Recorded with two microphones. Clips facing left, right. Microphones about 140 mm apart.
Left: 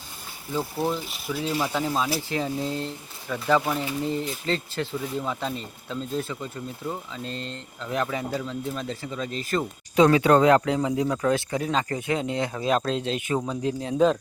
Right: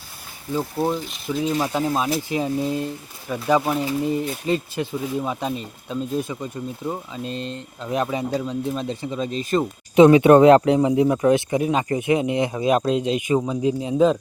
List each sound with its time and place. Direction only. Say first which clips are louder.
1.3 s speech: right 4 dB; 15° right (ahead or behind)